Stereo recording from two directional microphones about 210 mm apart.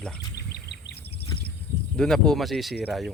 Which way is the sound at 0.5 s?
50° left (ahead or behind).